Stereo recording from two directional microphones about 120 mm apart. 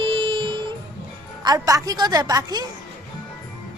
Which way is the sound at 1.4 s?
30° right (ahead or behind).